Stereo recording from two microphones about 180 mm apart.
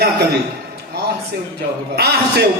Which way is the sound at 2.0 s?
65° right (ahead or behind).